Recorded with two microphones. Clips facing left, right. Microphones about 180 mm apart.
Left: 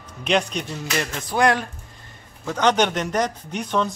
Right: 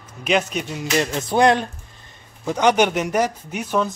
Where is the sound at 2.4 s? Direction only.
10° right (ahead or behind).